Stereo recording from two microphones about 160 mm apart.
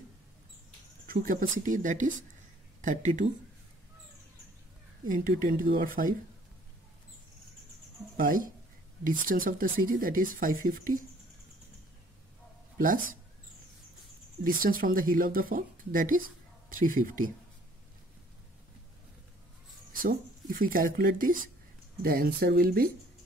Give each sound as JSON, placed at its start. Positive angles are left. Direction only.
{"t": 1.0, "sound": "speech", "side_deg": -60}
{"t": 5.0, "sound": "speech", "side_deg": -55}
{"t": 8.2, "sound": "speech", "side_deg": -60}
{"t": 12.7, "sound": "speech", "side_deg": -60}
{"t": 14.4, "sound": "speech", "side_deg": -60}
{"t": 19.9, "sound": "speech", "side_deg": -60}